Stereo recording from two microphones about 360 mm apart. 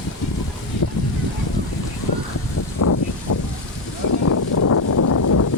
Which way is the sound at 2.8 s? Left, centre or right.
Left.